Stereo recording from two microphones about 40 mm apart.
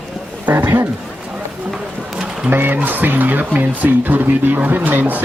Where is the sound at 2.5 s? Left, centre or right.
Right.